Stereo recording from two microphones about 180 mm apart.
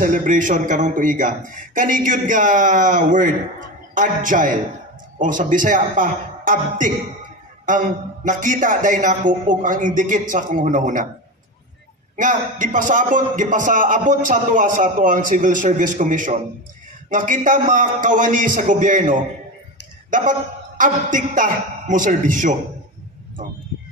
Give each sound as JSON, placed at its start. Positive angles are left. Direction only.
{"t": 0.0, "sound": "a man's voice", "side_deg": -45}
{"t": 12.2, "sound": "a man's voice", "side_deg": -45}